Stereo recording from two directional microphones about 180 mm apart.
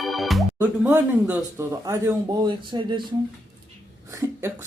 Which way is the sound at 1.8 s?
20° right (ahead or behind).